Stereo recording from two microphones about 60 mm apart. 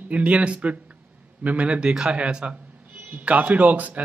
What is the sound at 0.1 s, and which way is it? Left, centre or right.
A man's voice, right.